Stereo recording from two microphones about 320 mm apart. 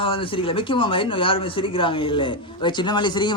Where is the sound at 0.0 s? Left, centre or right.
Centre.